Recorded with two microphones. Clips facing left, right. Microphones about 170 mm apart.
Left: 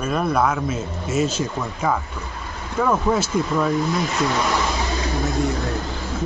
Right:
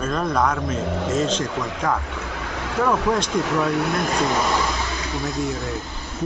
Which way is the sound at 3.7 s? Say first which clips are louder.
Left 1 dB; 70° right (ahead or behind).